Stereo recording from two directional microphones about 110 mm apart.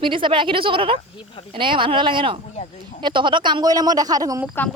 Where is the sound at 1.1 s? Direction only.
55° left (ahead or behind).